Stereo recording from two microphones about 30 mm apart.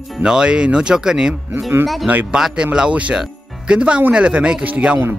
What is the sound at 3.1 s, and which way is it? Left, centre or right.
Speech, right.